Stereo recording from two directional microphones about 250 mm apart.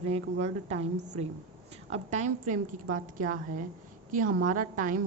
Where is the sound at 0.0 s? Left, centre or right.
Right.